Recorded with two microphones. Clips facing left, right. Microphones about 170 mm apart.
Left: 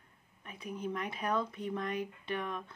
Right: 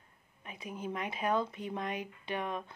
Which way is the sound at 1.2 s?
25° right (ahead or behind).